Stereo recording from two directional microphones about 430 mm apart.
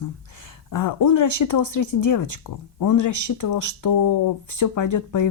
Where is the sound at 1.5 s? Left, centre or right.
Left.